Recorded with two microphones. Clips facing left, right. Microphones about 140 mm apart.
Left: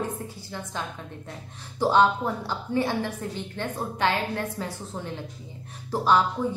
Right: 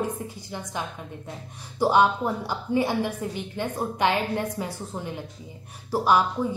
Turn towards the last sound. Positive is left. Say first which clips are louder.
# right 1 dB
turn(degrees=-10)  # may be behind; listen again after turning